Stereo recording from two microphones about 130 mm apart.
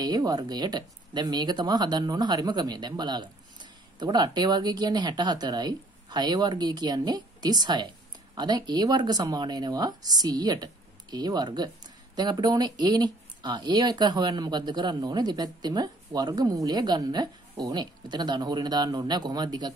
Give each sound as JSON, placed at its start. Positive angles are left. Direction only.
{"t": 0.0, "sound": "speech", "side_deg": -30}